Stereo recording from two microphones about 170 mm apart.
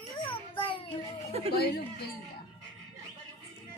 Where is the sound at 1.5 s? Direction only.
70° left (ahead or behind).